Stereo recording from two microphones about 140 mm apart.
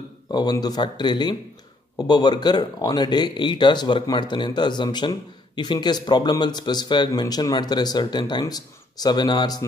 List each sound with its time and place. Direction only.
0.3 s speech: 30° left (ahead or behind)